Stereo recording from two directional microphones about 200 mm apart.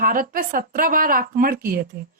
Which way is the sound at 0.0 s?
45° right (ahead or behind).